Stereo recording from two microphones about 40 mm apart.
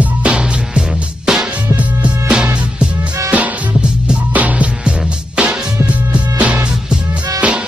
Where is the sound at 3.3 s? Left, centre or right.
Right.